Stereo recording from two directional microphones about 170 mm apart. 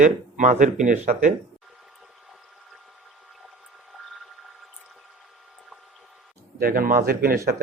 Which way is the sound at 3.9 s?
Centre (ahead or behind).